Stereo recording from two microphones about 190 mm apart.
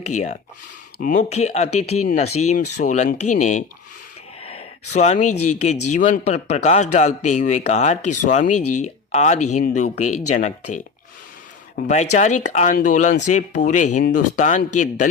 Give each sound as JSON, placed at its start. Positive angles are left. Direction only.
{"t": 0.1, "sound": "speech", "side_deg": 40}
{"t": 11.9, "sound": "speech", "side_deg": 40}